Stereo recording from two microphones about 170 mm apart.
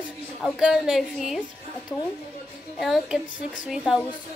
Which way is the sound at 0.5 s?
5° right (ahead or behind).